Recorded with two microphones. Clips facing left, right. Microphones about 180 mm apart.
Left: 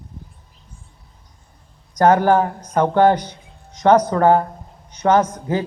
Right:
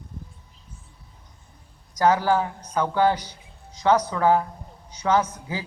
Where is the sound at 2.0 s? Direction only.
55° left (ahead or behind).